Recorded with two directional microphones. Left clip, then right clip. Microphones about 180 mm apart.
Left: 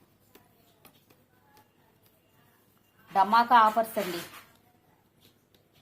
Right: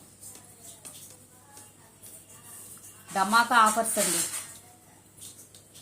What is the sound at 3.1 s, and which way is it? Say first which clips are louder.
Speech: left 1 dB; 45° left (ahead or behind).